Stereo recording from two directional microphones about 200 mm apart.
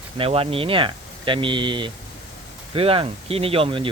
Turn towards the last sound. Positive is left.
turn(degrees=-25)  # may be behind; listen again after turning